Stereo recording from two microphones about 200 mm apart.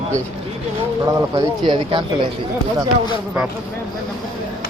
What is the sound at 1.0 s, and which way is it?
Speech, 20° right (ahead or behind).